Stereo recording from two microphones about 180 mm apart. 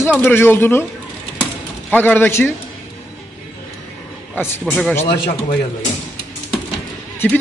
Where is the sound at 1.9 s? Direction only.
10° left (ahead or behind).